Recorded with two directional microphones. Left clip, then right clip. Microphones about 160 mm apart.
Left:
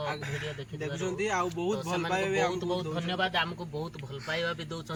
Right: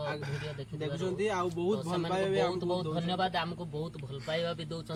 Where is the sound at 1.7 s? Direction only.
15° right (ahead or behind).